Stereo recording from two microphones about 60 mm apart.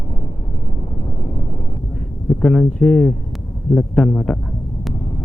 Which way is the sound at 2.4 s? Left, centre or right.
Centre.